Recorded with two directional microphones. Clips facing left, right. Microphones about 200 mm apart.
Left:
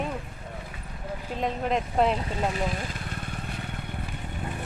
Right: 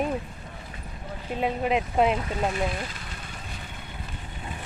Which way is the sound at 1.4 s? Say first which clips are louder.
Right 2 dB; 5° right (ahead or behind).